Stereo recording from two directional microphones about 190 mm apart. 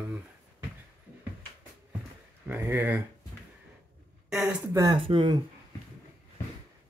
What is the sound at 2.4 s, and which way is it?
Speech, 10° right (ahead or behind).